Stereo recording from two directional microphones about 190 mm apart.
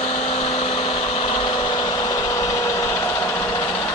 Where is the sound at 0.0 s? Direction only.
35° left (ahead or behind); by 3.4 s 15° left (ahead or behind).